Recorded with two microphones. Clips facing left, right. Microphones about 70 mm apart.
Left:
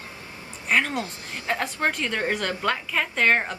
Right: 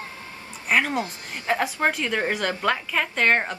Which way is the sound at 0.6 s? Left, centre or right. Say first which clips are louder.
Right 1 dB; centre.